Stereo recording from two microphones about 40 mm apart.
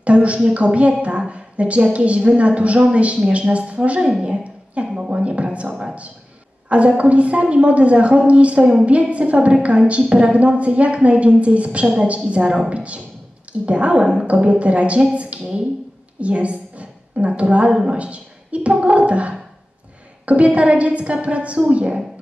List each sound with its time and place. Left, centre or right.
0.0 s a woman's voice: right
4.3 s a sound: right
4.9 s speech: right
5.2 s a woman's voice: right
16.2 s a sound: right
17.4 s a woman's voice: right
17.9 s gargling: right
20.2 s a woman's voice: right